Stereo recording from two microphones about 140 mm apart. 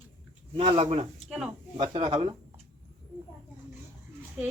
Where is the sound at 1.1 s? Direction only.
5° right (ahead or behind).